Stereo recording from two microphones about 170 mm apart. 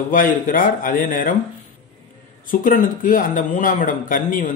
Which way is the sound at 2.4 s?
55° left (ahead or behind).